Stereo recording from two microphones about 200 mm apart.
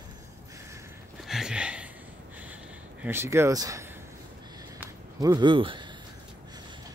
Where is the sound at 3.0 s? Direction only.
10° right (ahead or behind).